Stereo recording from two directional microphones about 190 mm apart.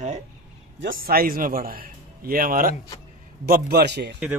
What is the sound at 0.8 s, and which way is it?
A man's voice, 50° right (ahead or behind).